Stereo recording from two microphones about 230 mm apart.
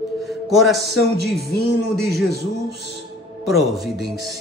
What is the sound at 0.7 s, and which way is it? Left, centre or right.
Speech, right.